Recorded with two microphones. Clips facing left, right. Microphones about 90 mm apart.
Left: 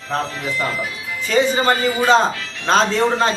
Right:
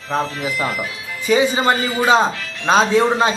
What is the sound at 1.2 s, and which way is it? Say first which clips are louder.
Speech: right 1 dB; 15° right (ahead or behind).